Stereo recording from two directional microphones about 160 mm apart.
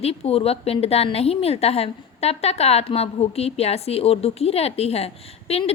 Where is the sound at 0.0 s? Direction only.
40° left (ahead or behind).